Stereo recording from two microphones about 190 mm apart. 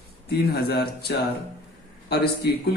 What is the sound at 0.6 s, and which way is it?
Speech, 55° left (ahead or behind).